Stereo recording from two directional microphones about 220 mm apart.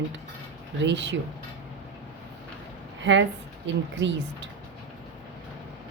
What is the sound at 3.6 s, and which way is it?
Speech, 55° right (ahead or behind).